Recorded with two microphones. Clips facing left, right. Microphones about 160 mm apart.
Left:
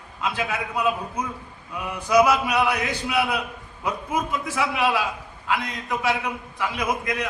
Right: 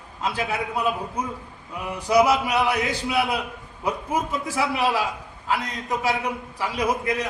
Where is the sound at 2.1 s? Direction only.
25° right (ahead or behind).